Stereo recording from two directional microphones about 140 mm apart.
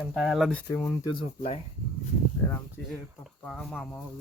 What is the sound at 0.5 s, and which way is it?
Speech, 20° left (ahead or behind).